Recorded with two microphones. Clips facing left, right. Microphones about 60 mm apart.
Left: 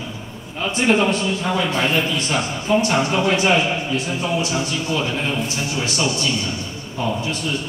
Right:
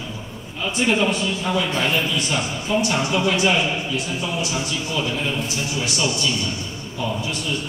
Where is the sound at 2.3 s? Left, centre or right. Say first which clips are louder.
Left 3 dB; left.